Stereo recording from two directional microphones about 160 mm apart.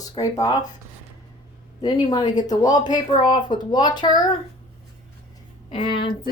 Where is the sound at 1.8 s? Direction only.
25° left (ahead or behind).